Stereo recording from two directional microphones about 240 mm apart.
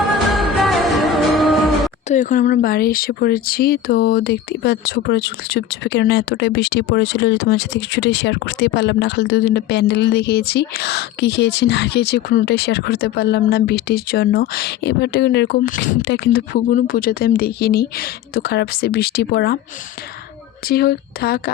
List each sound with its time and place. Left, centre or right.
0.3 s music: centre
2.0 s speech: left
20.7 s speech: left